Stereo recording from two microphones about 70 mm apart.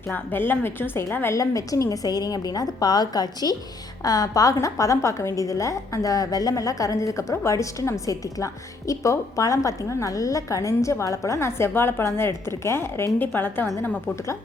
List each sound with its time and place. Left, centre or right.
0.1 s a woman's voice: left
1.4 s a woman's voice: left